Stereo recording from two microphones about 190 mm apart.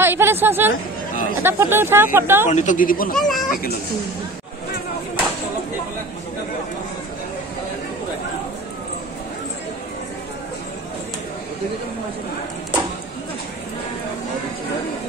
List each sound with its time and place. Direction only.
0.0 s a woman's voice: 10° right (ahead or behind)
2.5 s speech: 40° left (ahead or behind)
3.2 s a sound: centre (ahead or behind)